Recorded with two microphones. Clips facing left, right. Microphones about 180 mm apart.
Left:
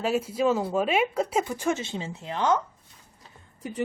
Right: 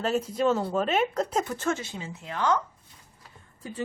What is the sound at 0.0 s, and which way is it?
Speech, 10° left (ahead or behind).